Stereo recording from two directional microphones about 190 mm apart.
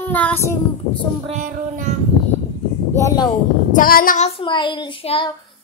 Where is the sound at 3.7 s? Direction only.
50° left (ahead or behind).